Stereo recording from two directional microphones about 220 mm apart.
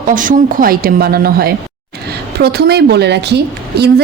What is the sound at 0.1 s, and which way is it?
A woman's voice, 35° right (ahead or behind).